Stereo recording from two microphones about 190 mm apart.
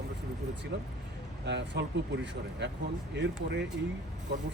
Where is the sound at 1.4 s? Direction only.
65° right (ahead or behind).